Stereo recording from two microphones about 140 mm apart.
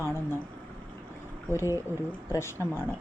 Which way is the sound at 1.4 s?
20° left (ahead or behind).